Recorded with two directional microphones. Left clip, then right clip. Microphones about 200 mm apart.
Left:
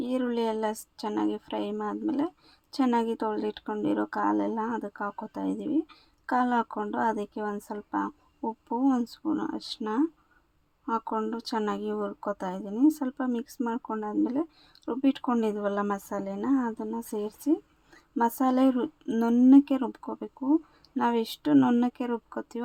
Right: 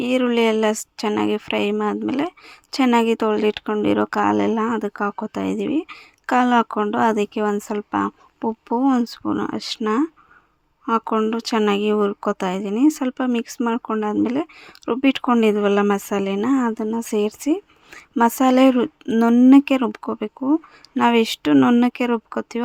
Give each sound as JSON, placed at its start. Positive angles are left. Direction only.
{"t": 0.0, "sound": "a woman's voice", "side_deg": -25}